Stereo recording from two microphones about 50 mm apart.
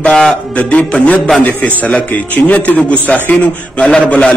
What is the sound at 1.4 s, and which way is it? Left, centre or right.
A man's voice, left.